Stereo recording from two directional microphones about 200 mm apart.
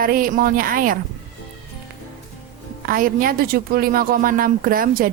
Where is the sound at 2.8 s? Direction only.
45° right (ahead or behind).